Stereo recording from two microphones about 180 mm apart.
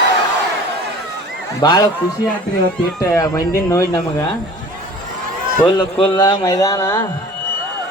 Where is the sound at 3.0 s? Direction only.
20° left (ahead or behind).